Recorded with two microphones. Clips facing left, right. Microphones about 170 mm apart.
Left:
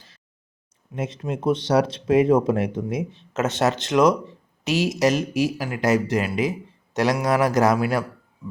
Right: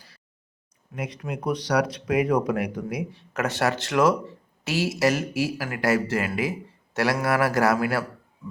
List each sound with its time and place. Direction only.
0.9 s speech: 25° left (ahead or behind)